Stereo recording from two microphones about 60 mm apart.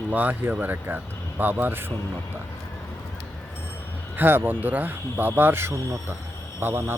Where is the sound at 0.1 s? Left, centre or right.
Right.